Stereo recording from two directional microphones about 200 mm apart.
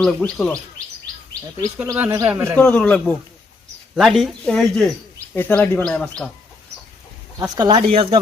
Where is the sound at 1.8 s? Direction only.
10° right (ahead or behind).